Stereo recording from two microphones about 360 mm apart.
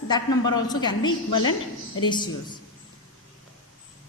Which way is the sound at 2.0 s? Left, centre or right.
Centre.